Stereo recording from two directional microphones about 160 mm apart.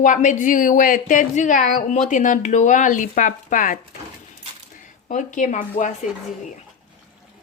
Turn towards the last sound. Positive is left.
turn(degrees=50)  # may be behind; listen again after turning